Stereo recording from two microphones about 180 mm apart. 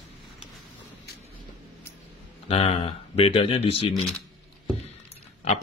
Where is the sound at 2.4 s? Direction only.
35° left (ahead or behind).